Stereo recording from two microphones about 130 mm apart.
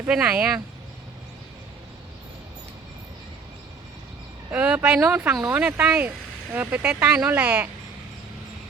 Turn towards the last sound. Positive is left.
turn(degrees=-15)  # may be behind; listen again after turning